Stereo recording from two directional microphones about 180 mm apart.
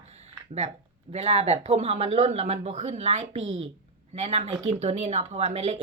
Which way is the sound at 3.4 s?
90° right.